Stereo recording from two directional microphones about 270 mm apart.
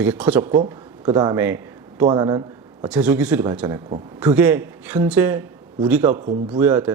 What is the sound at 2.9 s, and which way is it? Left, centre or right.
Speech, centre.